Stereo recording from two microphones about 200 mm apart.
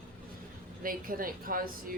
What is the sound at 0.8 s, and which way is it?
Speech, 45° right (ahead or behind).